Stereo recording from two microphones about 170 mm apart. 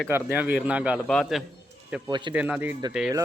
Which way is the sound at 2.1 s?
25° right (ahead or behind).